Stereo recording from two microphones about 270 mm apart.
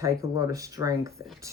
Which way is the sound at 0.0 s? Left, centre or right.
Centre.